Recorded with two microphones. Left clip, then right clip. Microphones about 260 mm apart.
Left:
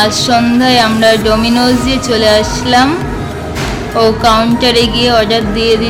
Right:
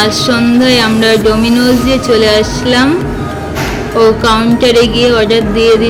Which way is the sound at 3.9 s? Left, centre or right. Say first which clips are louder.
Right 1 dB; centre.